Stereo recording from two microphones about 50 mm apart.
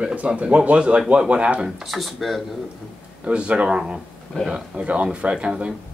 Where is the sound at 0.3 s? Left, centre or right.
Right.